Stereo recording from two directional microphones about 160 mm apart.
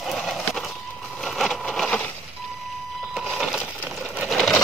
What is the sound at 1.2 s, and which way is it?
Wood, centre (ahead or behind).